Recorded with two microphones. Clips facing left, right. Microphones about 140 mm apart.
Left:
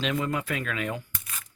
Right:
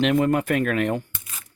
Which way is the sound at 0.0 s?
55° right (ahead or behind).